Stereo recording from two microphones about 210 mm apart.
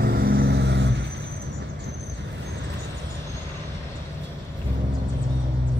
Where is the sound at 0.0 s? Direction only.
50° right (ahead or behind).